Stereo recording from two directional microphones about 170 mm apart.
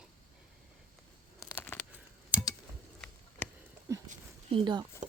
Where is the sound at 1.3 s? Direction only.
15° left (ahead or behind).